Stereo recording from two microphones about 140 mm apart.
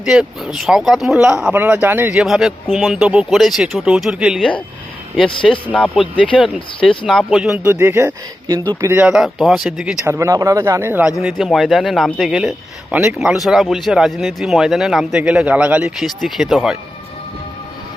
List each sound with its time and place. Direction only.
0.0 s speech: 5° right (ahead or behind)
2.1 s speech: centre (ahead or behind)
5.4 s speech: centre (ahead or behind)
7.7 s speech: 15° right (ahead or behind)
9.0 s speech: 5° right (ahead or behind)
10.1 s speech: 20° right (ahead or behind)
11.2 s speech: 5° right (ahead or behind)